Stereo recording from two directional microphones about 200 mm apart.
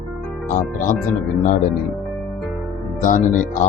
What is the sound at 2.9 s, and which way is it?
Speech, 40° left (ahead or behind).